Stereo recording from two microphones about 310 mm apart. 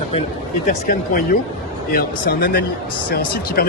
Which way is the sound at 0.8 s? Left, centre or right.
Left.